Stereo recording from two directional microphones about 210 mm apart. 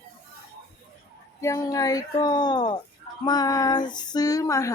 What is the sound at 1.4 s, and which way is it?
Speech, 15° left (ahead or behind).